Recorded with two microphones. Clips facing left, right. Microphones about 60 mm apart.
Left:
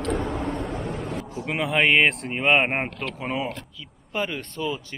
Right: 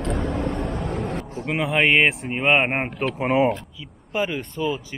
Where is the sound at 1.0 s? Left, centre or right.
Right.